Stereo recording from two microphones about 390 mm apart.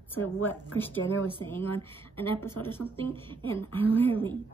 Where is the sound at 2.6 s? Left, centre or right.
Left.